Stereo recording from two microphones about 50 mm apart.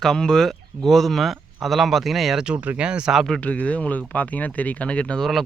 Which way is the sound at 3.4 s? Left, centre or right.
Left.